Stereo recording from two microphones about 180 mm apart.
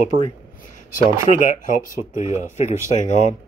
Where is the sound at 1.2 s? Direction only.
45° left (ahead or behind).